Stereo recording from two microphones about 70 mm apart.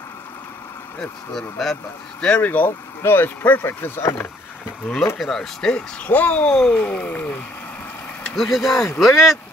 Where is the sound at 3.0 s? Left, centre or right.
Left.